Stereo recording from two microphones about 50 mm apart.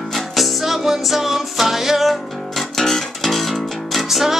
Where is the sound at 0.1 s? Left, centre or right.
Centre.